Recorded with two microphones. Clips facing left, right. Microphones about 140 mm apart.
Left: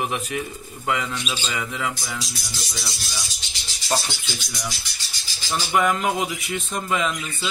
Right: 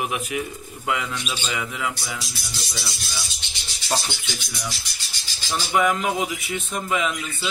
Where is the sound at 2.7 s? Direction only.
Centre (ahead or behind).